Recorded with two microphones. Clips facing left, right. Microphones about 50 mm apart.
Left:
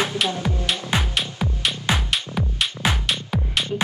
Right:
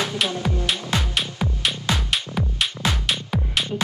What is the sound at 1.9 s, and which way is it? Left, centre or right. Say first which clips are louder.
Music: left 3 dB; left.